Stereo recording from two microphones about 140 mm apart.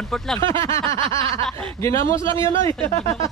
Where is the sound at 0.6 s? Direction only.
20° left (ahead or behind).